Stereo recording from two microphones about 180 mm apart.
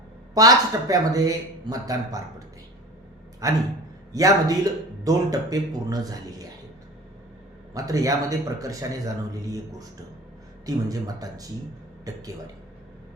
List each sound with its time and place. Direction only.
0.3 s speech: 20° right (ahead or behind)
3.4 s speech: 20° right (ahead or behind)
7.7 s speech: 20° right (ahead or behind)